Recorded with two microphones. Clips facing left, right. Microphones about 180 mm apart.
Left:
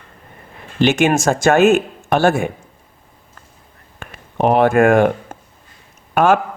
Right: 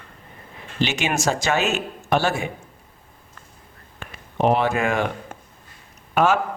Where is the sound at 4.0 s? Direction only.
55° left (ahead or behind).